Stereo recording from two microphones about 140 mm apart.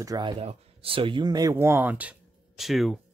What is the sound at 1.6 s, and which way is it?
Speech, 15° right (ahead or behind).